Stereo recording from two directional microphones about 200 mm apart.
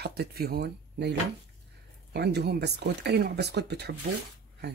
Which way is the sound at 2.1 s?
55° right (ahead or behind).